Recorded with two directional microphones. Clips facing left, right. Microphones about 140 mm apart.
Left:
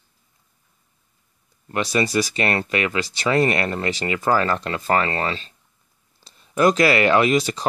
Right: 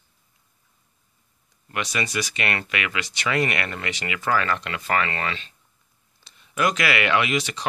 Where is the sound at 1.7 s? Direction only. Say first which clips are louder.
Left 7 dB; 35° left (ahead or behind).